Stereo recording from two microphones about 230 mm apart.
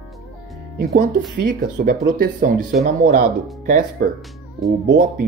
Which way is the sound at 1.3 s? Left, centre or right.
Right.